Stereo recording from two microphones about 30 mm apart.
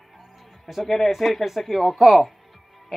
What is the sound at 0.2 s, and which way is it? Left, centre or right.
Music, centre.